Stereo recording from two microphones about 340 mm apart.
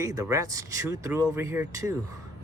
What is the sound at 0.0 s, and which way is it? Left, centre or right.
Speech, centre.